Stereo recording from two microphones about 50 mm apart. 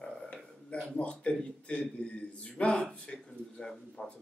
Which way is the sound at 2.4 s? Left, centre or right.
Left.